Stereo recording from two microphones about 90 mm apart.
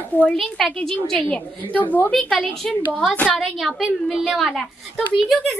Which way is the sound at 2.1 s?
5° left (ahead or behind).